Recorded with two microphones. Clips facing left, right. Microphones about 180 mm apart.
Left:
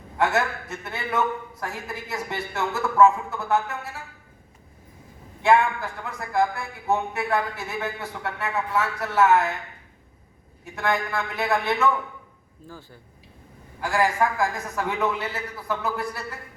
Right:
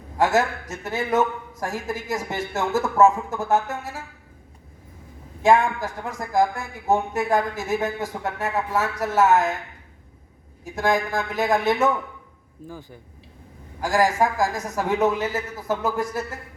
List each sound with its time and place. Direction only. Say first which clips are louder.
0.3 s speech: right 4 dB; 40° right (ahead or behind)
5.4 s speech: right 2 dB; 45° right (ahead or behind)
10.8 s speech: right 3 dB; 45° right (ahead or behind)
12.6 s speech: right 5 dB; 15° right (ahead or behind)
13.8 s a woman's voice: right 2 dB; 40° right (ahead or behind)